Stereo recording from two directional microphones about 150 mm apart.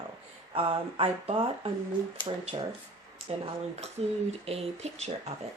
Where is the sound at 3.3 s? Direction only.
45° right (ahead or behind).